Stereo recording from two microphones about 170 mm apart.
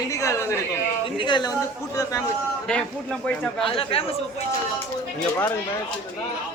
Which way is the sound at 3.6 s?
35° left (ahead or behind).